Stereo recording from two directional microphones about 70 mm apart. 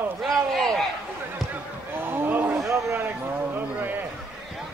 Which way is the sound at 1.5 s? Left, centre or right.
Right.